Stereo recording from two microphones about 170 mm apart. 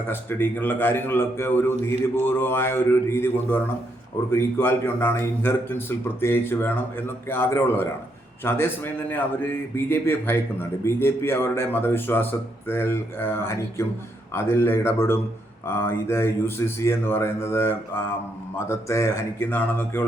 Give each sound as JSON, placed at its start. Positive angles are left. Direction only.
{"t": 0.1, "sound": "a man's voice", "side_deg": 10}